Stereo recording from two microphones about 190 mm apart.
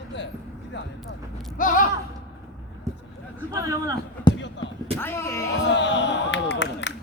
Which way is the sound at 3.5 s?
20° right (ahead or behind).